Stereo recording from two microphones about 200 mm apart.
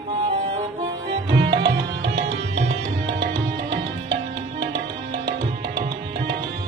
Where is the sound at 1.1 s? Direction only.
55° right (ahead or behind).